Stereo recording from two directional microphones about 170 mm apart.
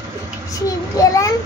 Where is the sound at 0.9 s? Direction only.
20° left (ahead or behind).